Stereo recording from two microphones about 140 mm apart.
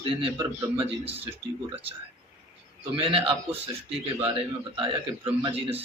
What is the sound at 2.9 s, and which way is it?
Speech, 40° right (ahead or behind).